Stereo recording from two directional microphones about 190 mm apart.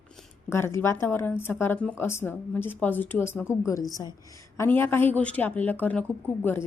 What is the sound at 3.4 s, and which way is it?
Speech, 5° right (ahead or behind).